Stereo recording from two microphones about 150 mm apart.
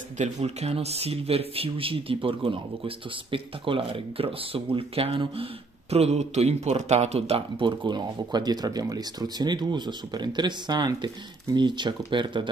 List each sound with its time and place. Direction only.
0.2 s speech: 45° right (ahead or behind); by 12.4 s 30° right (ahead or behind)